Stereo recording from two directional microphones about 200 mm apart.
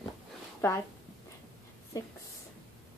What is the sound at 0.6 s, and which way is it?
Speech, 15° left (ahead or behind).